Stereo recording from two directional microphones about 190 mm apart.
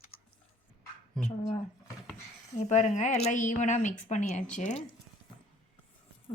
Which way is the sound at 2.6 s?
40° left (ahead or behind).